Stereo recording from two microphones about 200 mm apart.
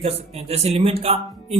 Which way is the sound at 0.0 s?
30° right (ahead or behind).